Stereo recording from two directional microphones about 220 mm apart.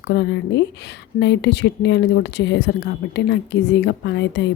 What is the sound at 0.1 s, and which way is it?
Speech, 50° left (ahead or behind).